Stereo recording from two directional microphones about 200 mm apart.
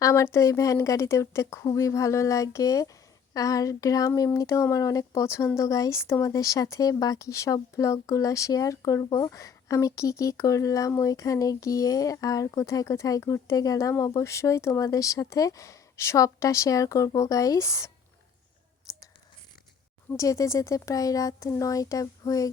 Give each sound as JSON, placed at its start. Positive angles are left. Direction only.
{"t": 0.0, "sound": "speech", "side_deg": 15}
{"t": 20.1, "sound": "speech", "side_deg": 15}